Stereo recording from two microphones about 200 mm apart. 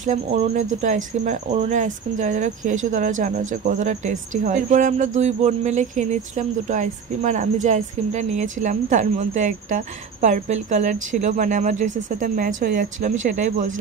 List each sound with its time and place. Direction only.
0.0 s speech: 35° right (ahead or behind)